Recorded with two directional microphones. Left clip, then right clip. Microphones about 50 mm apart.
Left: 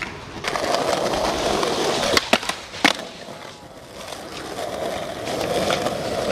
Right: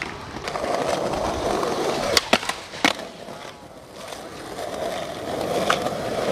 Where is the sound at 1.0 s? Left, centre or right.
Left.